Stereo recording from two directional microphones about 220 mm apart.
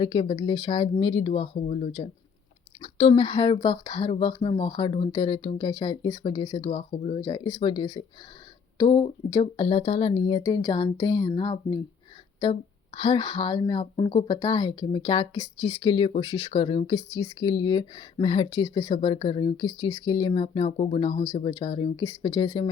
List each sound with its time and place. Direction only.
0.0 s speech: 25° left (ahead or behind)